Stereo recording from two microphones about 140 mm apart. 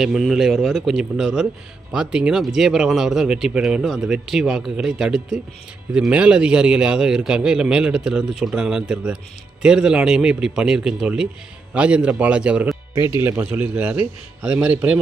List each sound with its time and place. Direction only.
0.0 s a man's voice: centre (ahead or behind)
12.9 s a man's voice: 20° right (ahead or behind)